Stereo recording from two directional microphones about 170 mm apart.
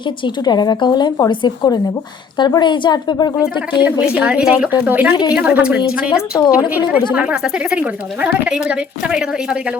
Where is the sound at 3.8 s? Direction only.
10° right (ahead or behind).